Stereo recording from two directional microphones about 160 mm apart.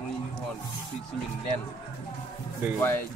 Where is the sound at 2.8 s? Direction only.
15° left (ahead or behind).